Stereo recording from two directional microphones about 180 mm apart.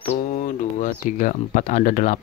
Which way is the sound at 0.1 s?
40° left (ahead or behind).